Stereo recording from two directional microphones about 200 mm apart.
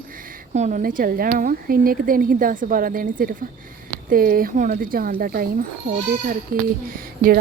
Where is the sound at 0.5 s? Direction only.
35° right (ahead or behind).